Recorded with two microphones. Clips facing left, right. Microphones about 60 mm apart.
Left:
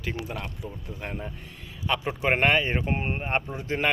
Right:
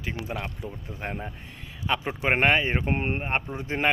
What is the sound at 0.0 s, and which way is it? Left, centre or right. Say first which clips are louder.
Speech: right 1 dB; centre.